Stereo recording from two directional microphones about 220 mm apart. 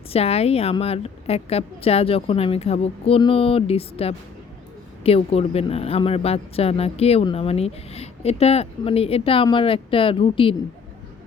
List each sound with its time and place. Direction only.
0.1 s speech: 30° left (ahead or behind)